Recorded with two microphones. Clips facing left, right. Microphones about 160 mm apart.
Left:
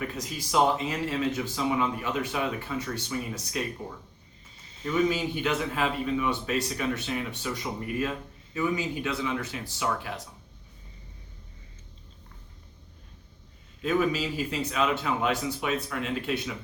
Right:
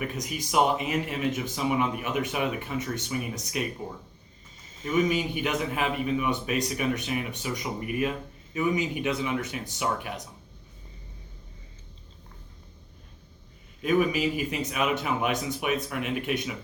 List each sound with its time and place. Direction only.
0.2 s speech: 15° right (ahead or behind)
5.0 s speech: 15° right (ahead or behind)
13.8 s speech: 15° right (ahead or behind)